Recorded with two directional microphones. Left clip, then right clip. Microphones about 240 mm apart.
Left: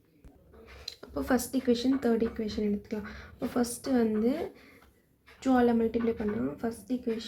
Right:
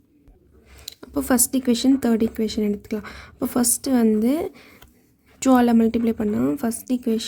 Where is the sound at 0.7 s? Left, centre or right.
Right.